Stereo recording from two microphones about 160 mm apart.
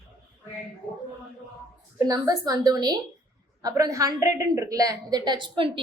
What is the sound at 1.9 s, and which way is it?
A woman's voice, 20° right (ahead or behind).